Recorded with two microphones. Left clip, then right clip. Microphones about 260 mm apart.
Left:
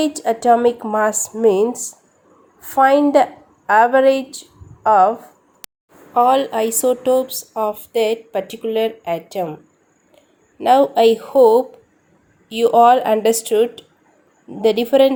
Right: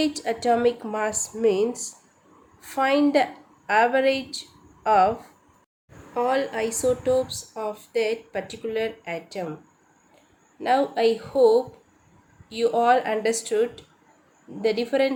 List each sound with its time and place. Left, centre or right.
0.0 s a woman's voice: centre
6.1 s a woman's voice: left
10.6 s a woman's voice: left